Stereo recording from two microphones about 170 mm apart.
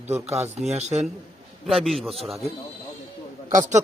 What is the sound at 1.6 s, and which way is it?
Speech, centre (ahead or behind).